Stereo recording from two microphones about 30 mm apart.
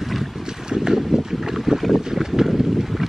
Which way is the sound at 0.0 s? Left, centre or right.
Centre.